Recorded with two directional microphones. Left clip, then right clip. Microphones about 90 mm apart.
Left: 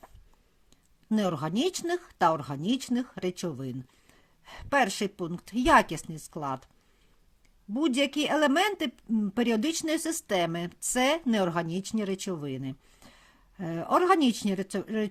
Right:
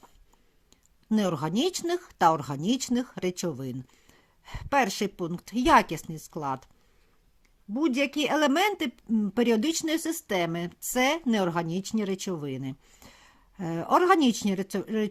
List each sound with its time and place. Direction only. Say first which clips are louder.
0.7 s speech: right 2 dB; 25° right (ahead or behind)
7.7 s speech: even; 5° right (ahead or behind)
8.1 s speech: even; 20° right (ahead or behind)